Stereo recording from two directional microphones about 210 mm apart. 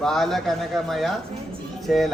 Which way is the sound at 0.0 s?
Centre (ahead or behind).